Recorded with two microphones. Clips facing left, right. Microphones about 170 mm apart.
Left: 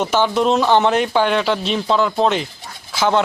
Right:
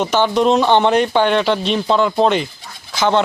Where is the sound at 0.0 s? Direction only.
5° left (ahead or behind).